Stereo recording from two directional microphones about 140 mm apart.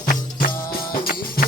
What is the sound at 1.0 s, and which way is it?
Music, 90° left.